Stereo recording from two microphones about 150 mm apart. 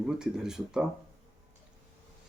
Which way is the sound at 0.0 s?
5° right (ahead or behind).